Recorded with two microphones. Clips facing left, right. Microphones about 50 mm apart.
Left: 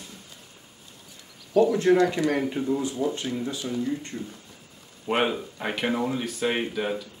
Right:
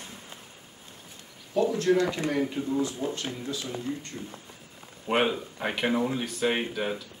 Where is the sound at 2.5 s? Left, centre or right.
Centre.